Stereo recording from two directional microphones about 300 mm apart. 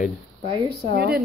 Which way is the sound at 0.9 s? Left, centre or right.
Right.